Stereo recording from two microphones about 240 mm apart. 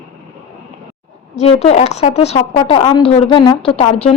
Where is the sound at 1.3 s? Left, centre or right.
Left.